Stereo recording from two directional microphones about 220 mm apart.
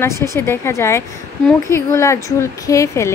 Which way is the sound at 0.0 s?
15° left (ahead or behind).